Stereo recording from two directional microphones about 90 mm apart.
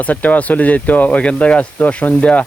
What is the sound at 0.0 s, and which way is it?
Speech, 15° left (ahead or behind).